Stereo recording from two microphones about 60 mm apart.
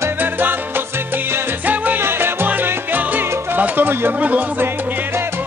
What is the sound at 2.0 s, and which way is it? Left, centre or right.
Salsa music, right.